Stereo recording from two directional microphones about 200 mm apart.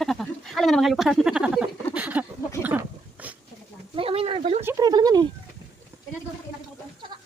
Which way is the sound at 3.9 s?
30° right (ahead or behind).